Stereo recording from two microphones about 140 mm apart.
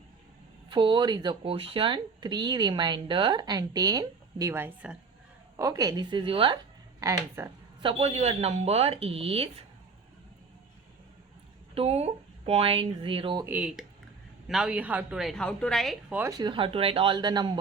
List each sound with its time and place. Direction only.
0.7 s speech: 35° right (ahead or behind); by 4.9 s 10° right (ahead or behind)
5.5 s speech: 25° right (ahead or behind)
7.0 s speech: 25° right (ahead or behind)
7.8 s speech: 40° right (ahead or behind)
11.7 s speech: 45° right (ahead or behind)
13.4 s a woman's voice: 10° right (ahead or behind)
16.4 s speech: 40° right (ahead or behind)